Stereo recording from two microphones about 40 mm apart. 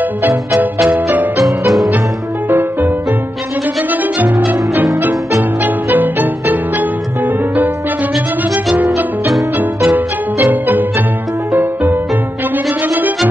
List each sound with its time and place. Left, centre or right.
0.0 s music: right
3.9 s music: right
5.6 s music: right
9.6 s music: right